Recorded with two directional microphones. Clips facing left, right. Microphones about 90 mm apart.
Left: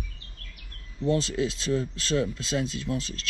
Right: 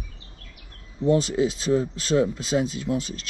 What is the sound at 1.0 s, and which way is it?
Speech, 20° right (ahead or behind).